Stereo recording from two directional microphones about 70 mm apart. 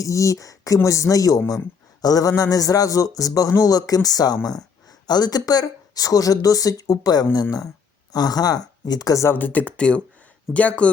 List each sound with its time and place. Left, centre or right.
0.0 s speech: left
5.0 s speech: left
9.3 s speech: left